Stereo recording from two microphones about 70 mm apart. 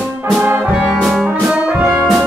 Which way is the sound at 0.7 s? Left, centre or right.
Centre.